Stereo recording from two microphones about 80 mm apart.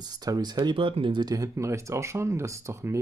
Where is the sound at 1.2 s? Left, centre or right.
Right.